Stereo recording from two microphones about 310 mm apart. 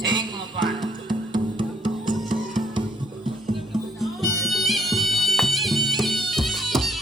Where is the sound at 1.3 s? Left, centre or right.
Centre.